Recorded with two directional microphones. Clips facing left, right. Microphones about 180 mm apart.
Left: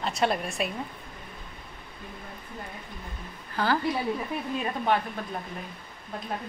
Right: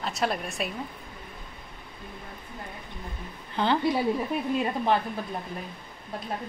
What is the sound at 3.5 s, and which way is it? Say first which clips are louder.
Speech: right 1 dB; 20° right (ahead or behind).